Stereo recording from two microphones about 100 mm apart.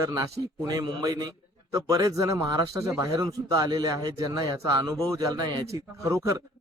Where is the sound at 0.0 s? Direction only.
35° right (ahead or behind).